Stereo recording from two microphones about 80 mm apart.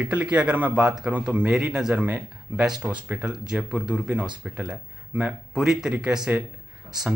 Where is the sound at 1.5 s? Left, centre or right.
Centre.